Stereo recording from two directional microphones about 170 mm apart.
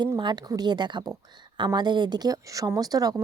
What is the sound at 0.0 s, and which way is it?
Speech, 25° right (ahead or behind).